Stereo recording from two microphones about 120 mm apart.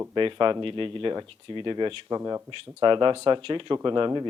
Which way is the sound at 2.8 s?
40° right (ahead or behind).